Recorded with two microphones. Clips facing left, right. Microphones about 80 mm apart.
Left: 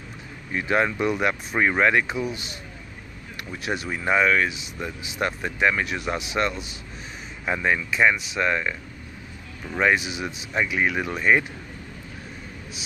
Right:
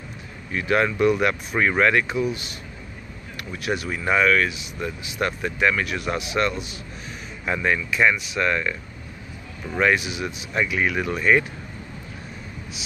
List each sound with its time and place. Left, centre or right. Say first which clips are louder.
0.5 s speech: right 1 dB; left
3.5 s speech: right 2 dB; left
9.8 s speech: right 1 dB; left